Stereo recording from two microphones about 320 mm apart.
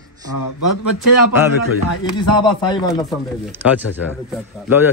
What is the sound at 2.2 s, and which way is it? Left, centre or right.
Speech, centre.